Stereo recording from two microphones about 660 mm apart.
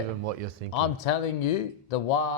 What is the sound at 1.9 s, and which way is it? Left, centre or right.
Speech, left.